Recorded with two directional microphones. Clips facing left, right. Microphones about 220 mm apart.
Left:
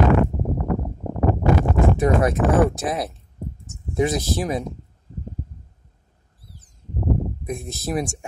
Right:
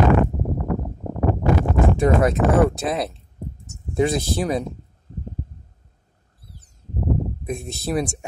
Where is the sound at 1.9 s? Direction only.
25° right (ahead or behind).